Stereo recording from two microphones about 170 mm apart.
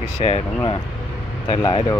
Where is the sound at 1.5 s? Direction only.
25° left (ahead or behind).